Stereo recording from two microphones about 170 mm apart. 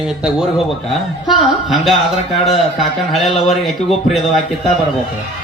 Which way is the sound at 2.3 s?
35° left (ahead or behind).